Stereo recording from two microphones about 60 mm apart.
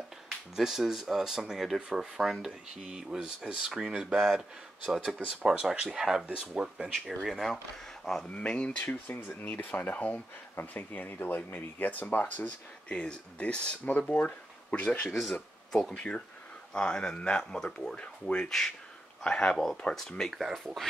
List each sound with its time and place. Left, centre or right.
0.6 s speech: centre
5.2 s speech: centre
6.9 s speech: centre
8.3 s speech: centre
8.8 s speech: left
15.0 s speech: centre
15.8 s speech: centre
19.5 s speech: centre